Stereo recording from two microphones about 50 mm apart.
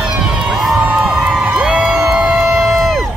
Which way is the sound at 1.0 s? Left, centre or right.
Centre.